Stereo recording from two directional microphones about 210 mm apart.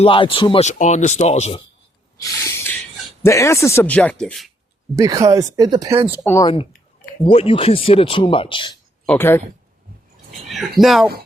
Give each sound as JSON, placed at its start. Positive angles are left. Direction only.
{"t": 0.0, "sound": "speech", "side_deg": 25}
{"t": 2.2, "sound": "a sound", "side_deg": 15}
{"t": 3.2, "sound": "speech", "side_deg": 15}
{"t": 4.9, "sound": "speech", "side_deg": -15}
{"t": 6.2, "sound": "speech", "side_deg": 15}
{"t": 7.3, "sound": "speech", "side_deg": 25}
{"t": 9.0, "sound": "speech", "side_deg": 10}
{"t": 10.5, "sound": "speech", "side_deg": 0}